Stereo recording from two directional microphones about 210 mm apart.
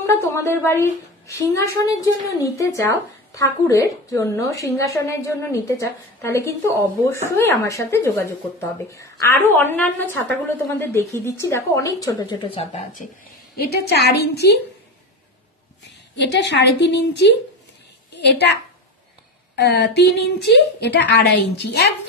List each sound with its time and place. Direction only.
0.1 s a woman's voice: 15° left (ahead or behind)
12.7 s speech: 40° left (ahead or behind)
13.6 s a woman's voice: 50° left (ahead or behind)
15.8 s a woman's voice: 55° left (ahead or behind)